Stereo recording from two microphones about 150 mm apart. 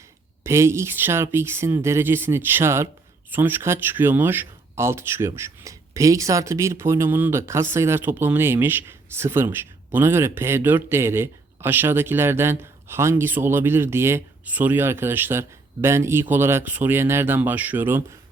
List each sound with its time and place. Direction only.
0.4 s speech: 20° right (ahead or behind)